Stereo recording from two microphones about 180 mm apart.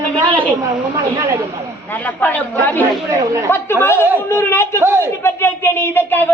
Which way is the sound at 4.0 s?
10° right (ahead or behind).